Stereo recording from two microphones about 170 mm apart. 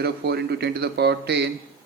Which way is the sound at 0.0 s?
80° right.